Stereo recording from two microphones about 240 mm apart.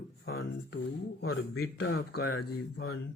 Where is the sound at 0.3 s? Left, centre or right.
Left.